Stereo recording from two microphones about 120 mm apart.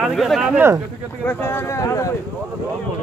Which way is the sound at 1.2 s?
15° left (ahead or behind).